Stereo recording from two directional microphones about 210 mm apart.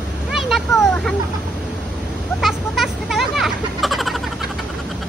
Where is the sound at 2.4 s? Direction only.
Centre (ahead or behind).